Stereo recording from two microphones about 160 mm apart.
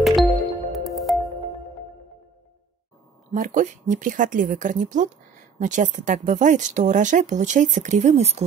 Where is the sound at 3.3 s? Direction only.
55° right (ahead or behind).